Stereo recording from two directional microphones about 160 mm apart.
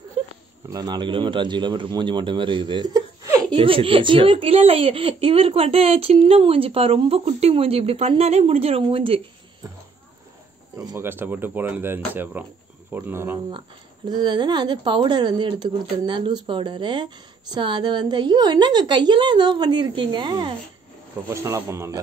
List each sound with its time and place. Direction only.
0.7 s speech: 25° right (ahead or behind)
3.5 s speech: 35° right (ahead or behind)
10.8 s speech: 20° right (ahead or behind)
14.0 s speech: 25° right (ahead or behind)